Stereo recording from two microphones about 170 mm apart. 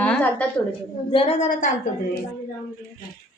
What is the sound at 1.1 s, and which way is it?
Speech, 35° left (ahead or behind).